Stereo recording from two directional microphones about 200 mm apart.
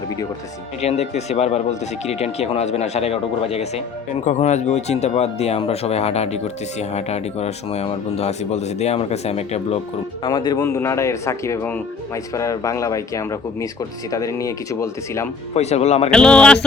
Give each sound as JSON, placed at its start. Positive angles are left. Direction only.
{"t": 0.8, "sound": "speech", "side_deg": 35}
{"t": 10.2, "sound": "speech", "side_deg": 20}
{"t": 15.5, "sound": "speech", "side_deg": 35}
{"t": 16.1, "sound": "speech", "side_deg": 5}